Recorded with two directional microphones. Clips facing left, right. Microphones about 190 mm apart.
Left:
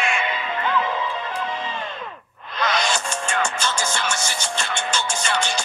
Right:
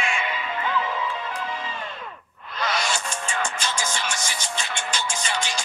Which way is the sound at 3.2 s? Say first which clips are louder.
Left 4 dB; 70° left (ahead or behind).